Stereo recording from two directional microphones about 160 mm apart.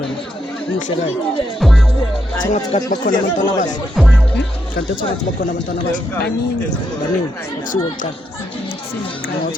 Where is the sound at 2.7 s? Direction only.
40° left (ahead or behind).